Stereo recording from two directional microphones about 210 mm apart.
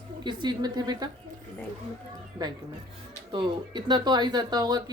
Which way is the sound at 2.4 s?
20° right (ahead or behind).